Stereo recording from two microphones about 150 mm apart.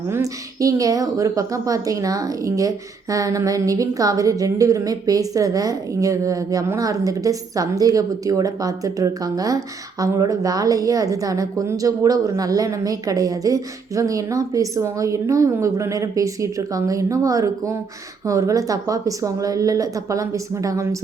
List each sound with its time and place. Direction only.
0.1 s a woman's voice: 20° right (ahead or behind)